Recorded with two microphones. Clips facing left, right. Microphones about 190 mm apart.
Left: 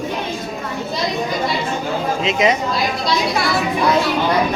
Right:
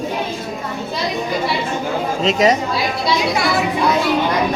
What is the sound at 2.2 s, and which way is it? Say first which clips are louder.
Speech: right 3 dB; 40° right (ahead or behind).